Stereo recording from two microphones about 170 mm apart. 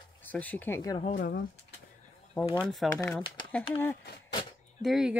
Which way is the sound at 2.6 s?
Centre (ahead or behind).